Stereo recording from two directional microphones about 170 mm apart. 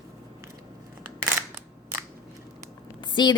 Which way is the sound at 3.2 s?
25° left (ahead or behind).